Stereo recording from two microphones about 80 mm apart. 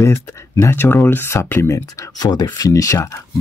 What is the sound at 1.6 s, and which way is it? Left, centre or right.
Speech, left.